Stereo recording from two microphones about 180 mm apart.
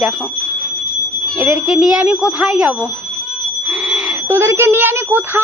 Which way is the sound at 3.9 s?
15° right (ahead or behind).